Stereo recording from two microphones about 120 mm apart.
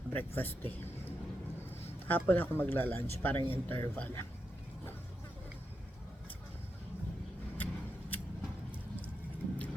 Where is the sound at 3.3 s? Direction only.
45° right (ahead or behind).